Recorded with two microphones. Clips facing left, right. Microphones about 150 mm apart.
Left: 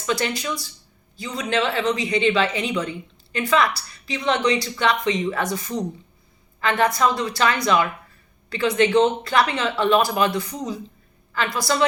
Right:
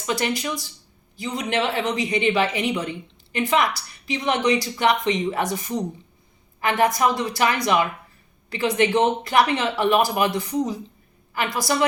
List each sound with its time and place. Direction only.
0.0 s a woman's voice: 15° right (ahead or behind)